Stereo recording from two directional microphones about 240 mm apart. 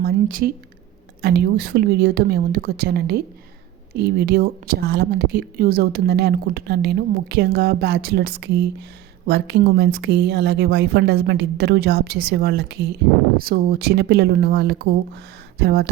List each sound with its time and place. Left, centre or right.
0.0 s speech: right